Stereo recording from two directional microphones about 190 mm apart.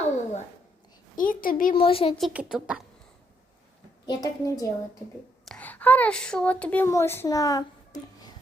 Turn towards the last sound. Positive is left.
turn(degrees=20)  # may be behind; listen again after turning